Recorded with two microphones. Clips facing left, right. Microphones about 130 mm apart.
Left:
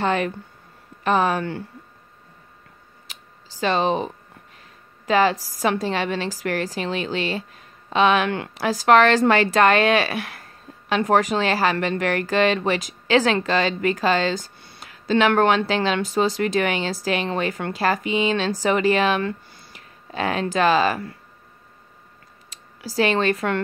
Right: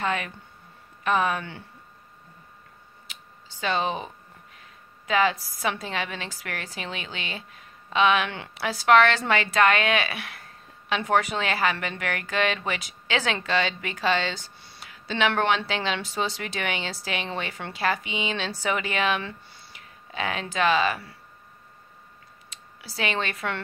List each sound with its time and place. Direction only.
0.0 s speech: 35° left (ahead or behind)
3.6 s speech: 40° left (ahead or behind)
22.5 s a sound: 40° left (ahead or behind)
22.9 s speech: 40° left (ahead or behind)